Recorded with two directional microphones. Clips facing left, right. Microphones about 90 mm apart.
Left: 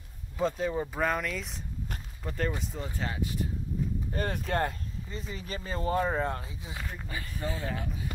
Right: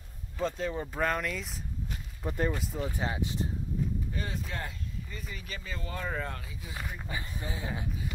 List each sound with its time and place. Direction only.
0.4 s speech: 10° left (ahead or behind)
2.2 s speech: 15° right (ahead or behind)
4.1 s speech: 55° left (ahead or behind)
5.1 s speech: 30° left (ahead or behind)
6.8 s speech: 10° right (ahead or behind)